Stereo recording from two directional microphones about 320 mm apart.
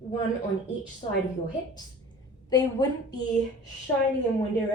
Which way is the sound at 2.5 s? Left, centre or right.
Centre.